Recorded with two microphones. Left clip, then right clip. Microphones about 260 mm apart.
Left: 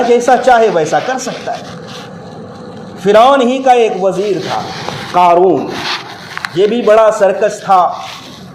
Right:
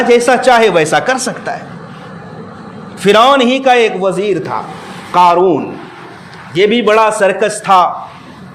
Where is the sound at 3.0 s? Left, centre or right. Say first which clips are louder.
Left 1 dB; right.